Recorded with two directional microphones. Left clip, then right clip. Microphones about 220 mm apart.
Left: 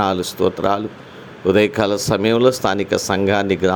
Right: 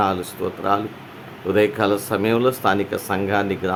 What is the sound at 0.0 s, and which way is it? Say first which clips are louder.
Speech: left 4 dB; 25° left (ahead or behind).